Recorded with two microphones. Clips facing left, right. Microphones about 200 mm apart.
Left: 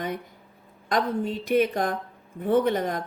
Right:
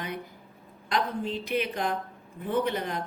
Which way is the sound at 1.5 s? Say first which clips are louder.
Left 7 dB; 45° left (ahead or behind).